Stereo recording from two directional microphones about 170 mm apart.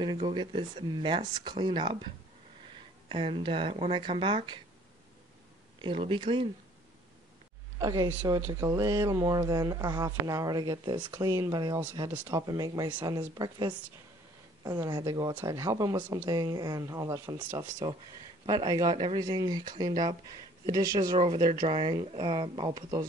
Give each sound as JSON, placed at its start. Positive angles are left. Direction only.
{"t": 0.0, "sound": "speech", "side_deg": -30}
{"t": 5.8, "sound": "speech", "side_deg": -30}
{"t": 7.8, "sound": "speech", "side_deg": -20}
{"t": 16.0, "sound": "speech", "side_deg": -10}
{"t": 16.3, "sound": "speech", "side_deg": -25}
{"t": 21.2, "sound": "speech", "side_deg": -30}